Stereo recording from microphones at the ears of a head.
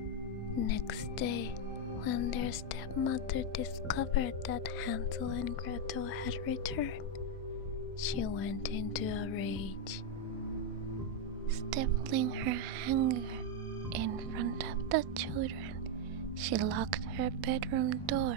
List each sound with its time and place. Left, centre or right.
0.6 s speech: left
8.0 s speech: left
11.7 s a woman's voice: right